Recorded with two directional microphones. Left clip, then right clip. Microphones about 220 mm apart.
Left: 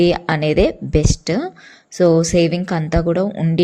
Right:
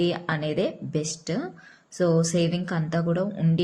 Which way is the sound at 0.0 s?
35° left (ahead or behind).